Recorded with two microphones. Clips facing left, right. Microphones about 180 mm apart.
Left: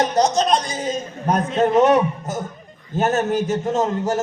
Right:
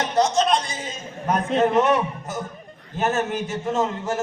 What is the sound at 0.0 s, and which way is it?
A man's voice, 40° left (ahead or behind).